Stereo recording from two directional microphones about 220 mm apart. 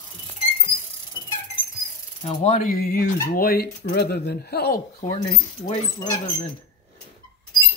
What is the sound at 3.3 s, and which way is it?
Speech, 45° left (ahead or behind).